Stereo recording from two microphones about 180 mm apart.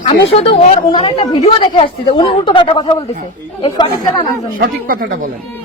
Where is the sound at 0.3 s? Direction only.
35° left (ahead or behind).